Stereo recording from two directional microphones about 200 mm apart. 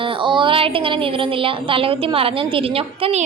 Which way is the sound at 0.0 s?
25° right (ahead or behind).